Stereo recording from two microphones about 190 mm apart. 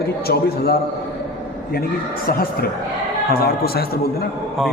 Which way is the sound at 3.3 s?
55° left (ahead or behind).